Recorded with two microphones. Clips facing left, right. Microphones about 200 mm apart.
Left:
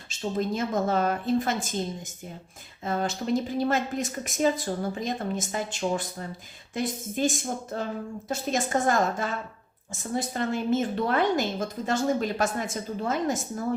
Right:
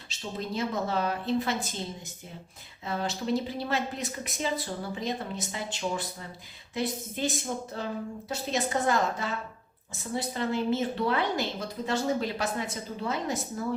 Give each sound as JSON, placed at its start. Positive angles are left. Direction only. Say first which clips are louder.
{"t": 0.1, "sound": "a woman's voice", "louder": "left 6 dB", "side_deg": 50}
{"t": 2.8, "sound": "a woman's voice", "louder": "left 3 dB", "side_deg": 50}